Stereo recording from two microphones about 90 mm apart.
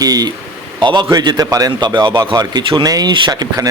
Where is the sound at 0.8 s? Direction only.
55° right (ahead or behind).